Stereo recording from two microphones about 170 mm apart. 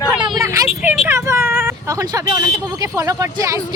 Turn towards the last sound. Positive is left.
turn(degrees=-20)  # may be behind; listen again after turning